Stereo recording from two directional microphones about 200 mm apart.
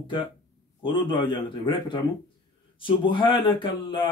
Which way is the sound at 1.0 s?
25° left (ahead or behind).